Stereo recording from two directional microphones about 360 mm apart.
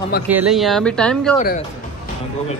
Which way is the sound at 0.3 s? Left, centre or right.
Centre.